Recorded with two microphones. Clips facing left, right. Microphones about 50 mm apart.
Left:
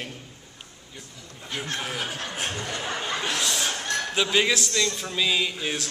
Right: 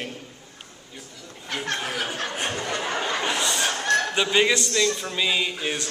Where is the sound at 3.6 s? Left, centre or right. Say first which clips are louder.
Right 6 dB; right.